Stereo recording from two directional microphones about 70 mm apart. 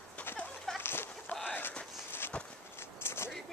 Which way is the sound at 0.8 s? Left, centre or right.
Left.